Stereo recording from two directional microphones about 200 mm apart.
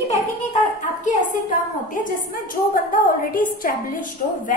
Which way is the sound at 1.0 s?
40° left (ahead or behind).